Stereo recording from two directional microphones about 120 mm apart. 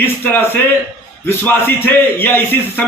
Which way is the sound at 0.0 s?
15° left (ahead or behind).